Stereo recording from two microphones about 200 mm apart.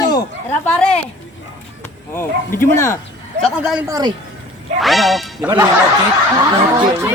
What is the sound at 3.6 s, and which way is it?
Quack, 5° right (ahead or behind).